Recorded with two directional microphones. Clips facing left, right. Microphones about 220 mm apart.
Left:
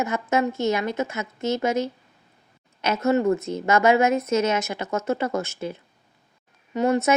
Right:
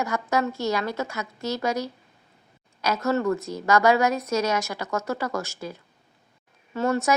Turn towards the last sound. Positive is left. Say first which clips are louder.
# left 3 dB
turn(degrees=20)  # may be behind; listen again after turning